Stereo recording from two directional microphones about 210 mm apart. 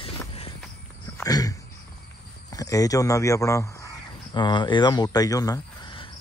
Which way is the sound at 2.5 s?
15° left (ahead or behind).